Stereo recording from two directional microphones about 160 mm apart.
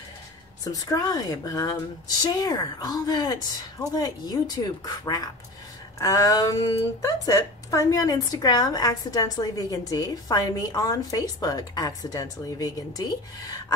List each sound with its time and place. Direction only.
0.7 s speech: 25° left (ahead or behind)